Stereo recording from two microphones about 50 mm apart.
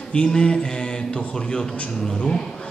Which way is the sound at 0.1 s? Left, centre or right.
Centre.